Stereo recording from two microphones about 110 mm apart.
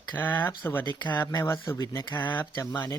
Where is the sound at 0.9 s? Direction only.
40° left (ahead or behind).